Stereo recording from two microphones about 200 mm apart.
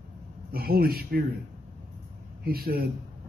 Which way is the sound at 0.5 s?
50° right (ahead or behind).